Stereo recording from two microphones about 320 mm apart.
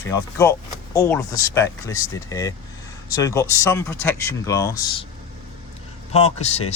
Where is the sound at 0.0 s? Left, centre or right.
Centre.